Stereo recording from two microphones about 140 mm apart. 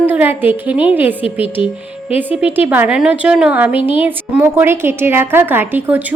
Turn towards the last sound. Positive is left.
turn(degrees=-10)  # may be behind; listen again after turning